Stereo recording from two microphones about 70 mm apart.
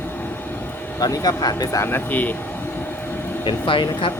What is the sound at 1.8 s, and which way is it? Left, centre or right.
Speech, left.